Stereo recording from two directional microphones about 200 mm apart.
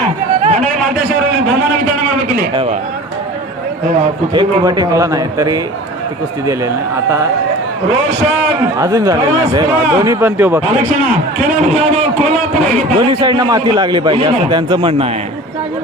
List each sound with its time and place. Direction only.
0.4 s a sound: 35° right (ahead or behind)
4.4 s a man's voice: 20° right (ahead or behind)
8.8 s a man's voice: 15° right (ahead or behind)
11.3 s a man's voice: 40° right (ahead or behind)